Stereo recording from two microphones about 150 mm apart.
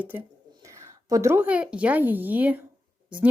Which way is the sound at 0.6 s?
20° right (ahead or behind).